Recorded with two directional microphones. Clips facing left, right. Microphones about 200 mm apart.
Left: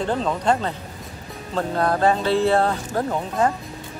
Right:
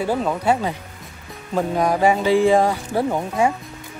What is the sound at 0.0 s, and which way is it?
Speech, 10° right (ahead or behind).